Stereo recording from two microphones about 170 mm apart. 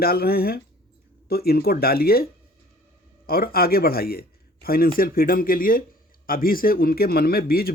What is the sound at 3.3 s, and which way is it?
Speech, 60° left (ahead or behind).